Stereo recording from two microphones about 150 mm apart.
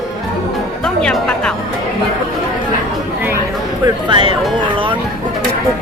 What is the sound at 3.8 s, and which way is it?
Speech, 35° right (ahead or behind).